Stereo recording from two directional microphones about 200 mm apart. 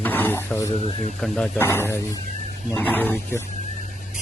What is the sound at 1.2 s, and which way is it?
Speech, 5° left (ahead or behind).